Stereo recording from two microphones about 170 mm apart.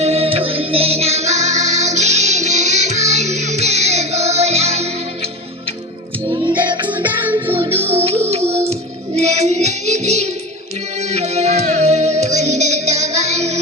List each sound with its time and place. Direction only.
0.0 s music: 35° right (ahead or behind)
6.5 s music: 10° right (ahead or behind)
7.9 s music: 35° right (ahead or behind)